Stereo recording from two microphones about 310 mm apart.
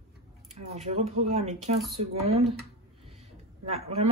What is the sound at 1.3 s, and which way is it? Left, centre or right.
Speech, right.